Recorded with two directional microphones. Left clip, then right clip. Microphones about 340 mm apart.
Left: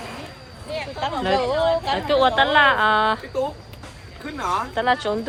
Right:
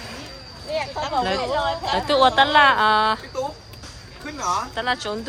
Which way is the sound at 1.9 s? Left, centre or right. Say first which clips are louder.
Right 4 dB; centre.